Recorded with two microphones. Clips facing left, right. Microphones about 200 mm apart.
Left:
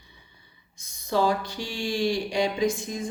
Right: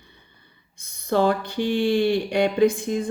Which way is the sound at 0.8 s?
60° right (ahead or behind).